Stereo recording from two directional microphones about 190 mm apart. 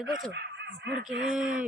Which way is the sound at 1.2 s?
5° right (ahead or behind).